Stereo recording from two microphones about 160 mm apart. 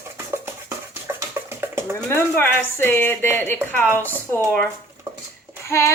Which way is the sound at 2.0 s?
15° left (ahead or behind).